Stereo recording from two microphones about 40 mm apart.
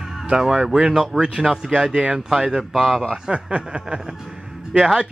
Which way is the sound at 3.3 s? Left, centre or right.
Right.